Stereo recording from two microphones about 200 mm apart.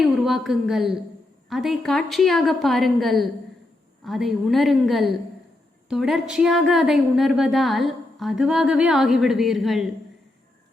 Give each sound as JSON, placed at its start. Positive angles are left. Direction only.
{"t": 0.0, "sound": "a woman's voice", "side_deg": 0}